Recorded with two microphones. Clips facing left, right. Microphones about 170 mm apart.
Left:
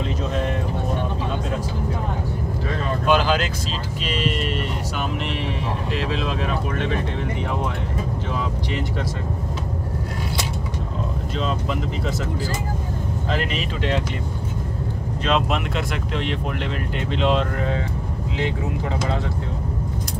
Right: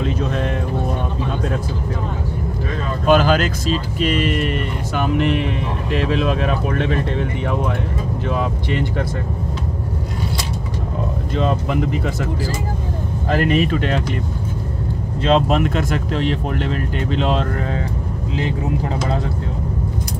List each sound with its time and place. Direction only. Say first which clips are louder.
3.1 s speech: right 5 dB; 50° right (ahead or behind)
5.9 s speech: right 8 dB; 65° right (ahead or behind)
11.3 s speech: right 6 dB; 60° right (ahead or behind)
13.3 s speech: right 10 dB; 55° right (ahead or behind)
15.2 s speech: right 6 dB; 35° right (ahead or behind)